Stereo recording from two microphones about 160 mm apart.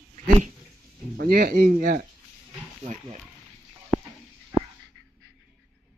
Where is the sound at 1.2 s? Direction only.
70° right (ahead or behind).